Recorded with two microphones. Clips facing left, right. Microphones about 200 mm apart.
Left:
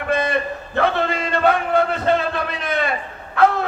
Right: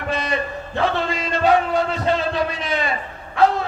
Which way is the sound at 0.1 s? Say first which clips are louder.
Left 4 dB; 55° left (ahead or behind).